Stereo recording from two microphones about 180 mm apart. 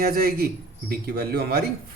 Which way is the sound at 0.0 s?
55° right (ahead or behind).